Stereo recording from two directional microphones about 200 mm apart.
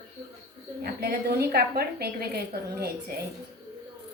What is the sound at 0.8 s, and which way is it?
A woman's voice, 50° right (ahead or behind).